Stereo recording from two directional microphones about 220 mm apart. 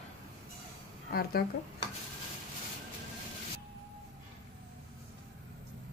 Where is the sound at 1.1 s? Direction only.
45° left (ahead or behind).